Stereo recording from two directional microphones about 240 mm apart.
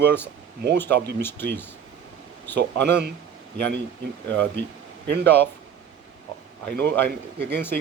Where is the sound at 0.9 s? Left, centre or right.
Right.